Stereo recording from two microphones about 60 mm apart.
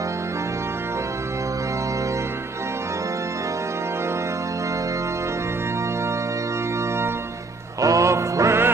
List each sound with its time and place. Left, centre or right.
7.8 s music: right